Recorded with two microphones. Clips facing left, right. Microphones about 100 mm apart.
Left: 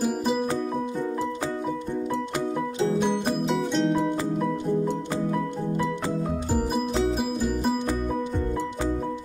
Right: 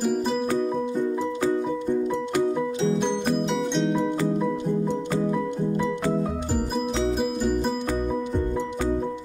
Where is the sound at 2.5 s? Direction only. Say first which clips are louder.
Right 1 dB; 5° left (ahead or behind).